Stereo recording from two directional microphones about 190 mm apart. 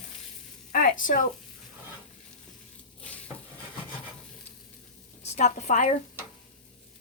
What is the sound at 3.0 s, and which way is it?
Stir, 5° left (ahead or behind).